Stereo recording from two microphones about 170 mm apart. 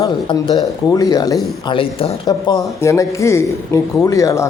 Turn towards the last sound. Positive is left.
turn(degrees=20)  # may be behind; listen again after turning